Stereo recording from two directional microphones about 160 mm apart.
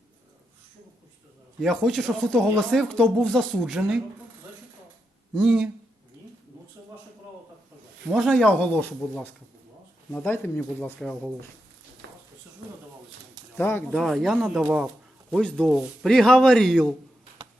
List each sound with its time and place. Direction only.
1.6 s speech: centre (ahead or behind)
5.3 s speech: 5° right (ahead or behind)
8.1 s speech: centre (ahead or behind)
13.6 s speech: 15° left (ahead or behind)
13.9 s speech: centre (ahead or behind)
15.3 s speech: 5° left (ahead or behind)